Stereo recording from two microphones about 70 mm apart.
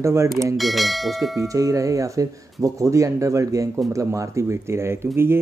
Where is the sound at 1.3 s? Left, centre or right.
Right.